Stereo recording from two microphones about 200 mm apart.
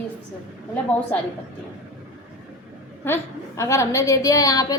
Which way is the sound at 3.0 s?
15° left (ahead or behind).